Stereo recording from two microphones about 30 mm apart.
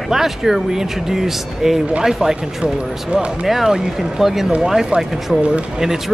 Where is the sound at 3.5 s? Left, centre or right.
Centre.